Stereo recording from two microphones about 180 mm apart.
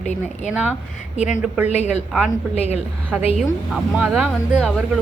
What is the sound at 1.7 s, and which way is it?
Speech, 40° left (ahead or behind).